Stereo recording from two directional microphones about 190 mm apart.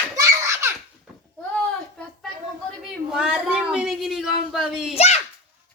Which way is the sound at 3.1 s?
5° right (ahead or behind).